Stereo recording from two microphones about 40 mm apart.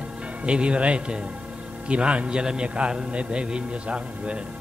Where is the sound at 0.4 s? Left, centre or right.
Right.